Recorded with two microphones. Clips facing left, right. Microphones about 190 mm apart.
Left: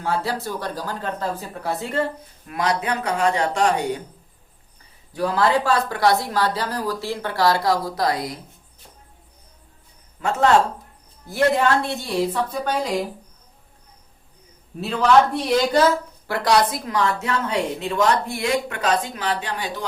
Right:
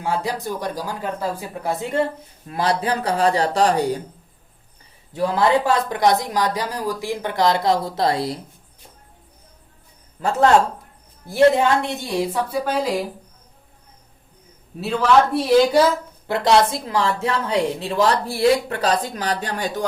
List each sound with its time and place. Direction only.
0.0 s a woman's voice: 15° right (ahead or behind)
2.5 s a woman's voice: 30° right (ahead or behind)
5.1 s a woman's voice: 20° right (ahead or behind)
11.3 s a woman's voice: 15° right (ahead or behind)
14.8 s a man's voice: centre (ahead or behind)
16.2 s a woman's voice: 25° right (ahead or behind); by 19.8 s 45° right (ahead or behind)